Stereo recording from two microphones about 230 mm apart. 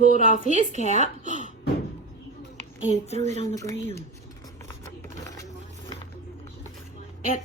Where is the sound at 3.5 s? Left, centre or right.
Centre.